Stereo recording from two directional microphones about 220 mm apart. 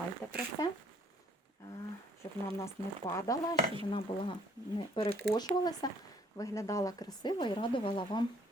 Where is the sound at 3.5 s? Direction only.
25° right (ahead or behind).